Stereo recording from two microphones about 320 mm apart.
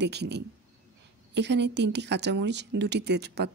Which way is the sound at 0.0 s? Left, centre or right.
Right.